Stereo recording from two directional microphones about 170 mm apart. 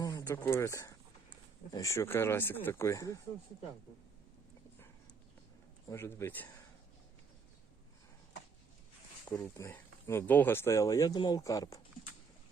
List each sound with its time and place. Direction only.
0.0 s speech: 20° left (ahead or behind)
5.9 s speech: 15° left (ahead or behind)
9.3 s speech: 15° left (ahead or behind)